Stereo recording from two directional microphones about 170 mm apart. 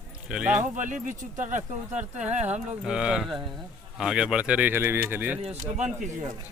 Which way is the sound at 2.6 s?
5° right (ahead or behind).